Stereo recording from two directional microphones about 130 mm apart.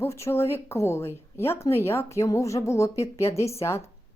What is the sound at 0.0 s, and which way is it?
A woman's voice, 20° left (ahead or behind).